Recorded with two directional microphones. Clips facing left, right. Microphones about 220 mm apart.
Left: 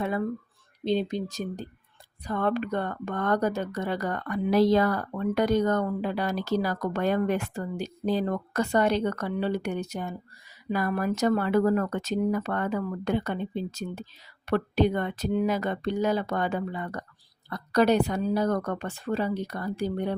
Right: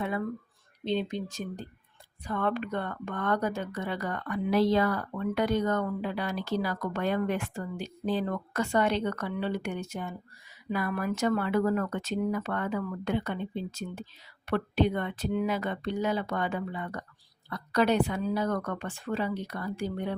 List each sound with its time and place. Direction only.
0.9 s speech: 40° left (ahead or behind)